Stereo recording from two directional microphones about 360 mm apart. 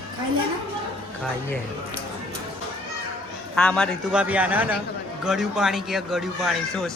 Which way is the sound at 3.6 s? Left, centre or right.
Centre.